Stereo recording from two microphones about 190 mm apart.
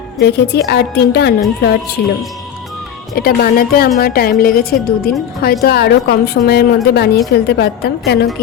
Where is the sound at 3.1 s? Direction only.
50° left (ahead or behind).